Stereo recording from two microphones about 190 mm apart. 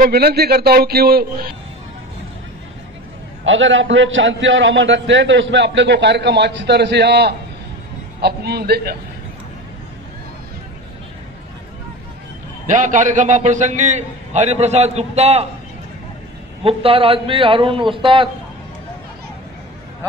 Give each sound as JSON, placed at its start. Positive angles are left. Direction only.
{"t": 0.0, "sound": "a man's voice", "side_deg": -55}
{"t": 3.4, "sound": "a man's voice", "side_deg": -90}
{"t": 12.6, "sound": "a man's voice", "side_deg": -40}
{"t": 16.6, "sound": "a man's voice", "side_deg": -30}